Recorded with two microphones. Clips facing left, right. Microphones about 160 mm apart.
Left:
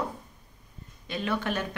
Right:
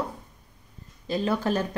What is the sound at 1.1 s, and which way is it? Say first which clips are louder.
Speech: right 5 dB; 35° right (ahead or behind).